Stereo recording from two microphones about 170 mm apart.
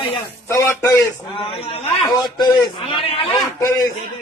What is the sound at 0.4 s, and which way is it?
Speech, 15° left (ahead or behind).